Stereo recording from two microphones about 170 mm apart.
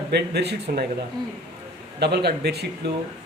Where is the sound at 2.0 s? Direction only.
75° right (ahead or behind).